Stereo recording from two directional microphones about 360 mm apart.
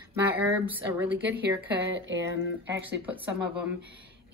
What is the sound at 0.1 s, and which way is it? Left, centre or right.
Speech, centre.